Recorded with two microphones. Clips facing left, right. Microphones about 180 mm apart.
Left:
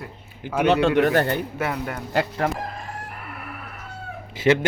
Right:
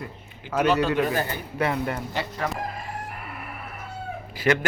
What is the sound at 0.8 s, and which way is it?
Speech, 75° left (ahead or behind).